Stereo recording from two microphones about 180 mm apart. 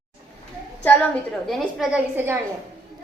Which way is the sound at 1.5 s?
Centre (ahead or behind).